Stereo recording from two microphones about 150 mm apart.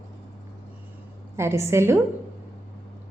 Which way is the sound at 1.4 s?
20° right (ahead or behind).